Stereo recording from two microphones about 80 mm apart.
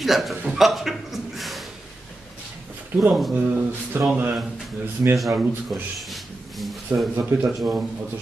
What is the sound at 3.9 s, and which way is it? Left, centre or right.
Speech, right.